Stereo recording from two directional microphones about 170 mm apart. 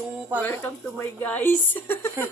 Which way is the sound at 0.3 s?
10° left (ahead or behind).